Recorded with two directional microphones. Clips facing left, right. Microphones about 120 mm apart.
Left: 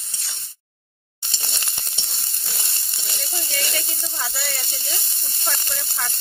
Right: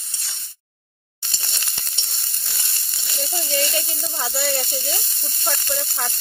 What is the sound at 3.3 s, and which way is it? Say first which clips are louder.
Speech: right 6 dB; 25° right (ahead or behind).